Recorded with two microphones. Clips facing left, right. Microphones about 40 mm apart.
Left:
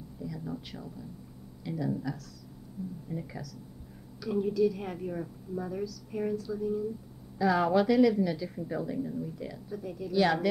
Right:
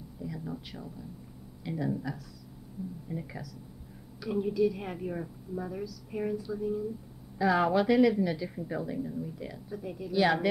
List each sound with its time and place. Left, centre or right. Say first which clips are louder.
0.2 s a sound: even; centre
0.5 s speech: left 1 dB; centre
1.6 s speech: even; centre
3.1 s a woman's voice: even; centre